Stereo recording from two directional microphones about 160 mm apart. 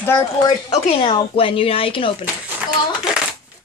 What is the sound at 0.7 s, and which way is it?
Speech, 35° left (ahead or behind).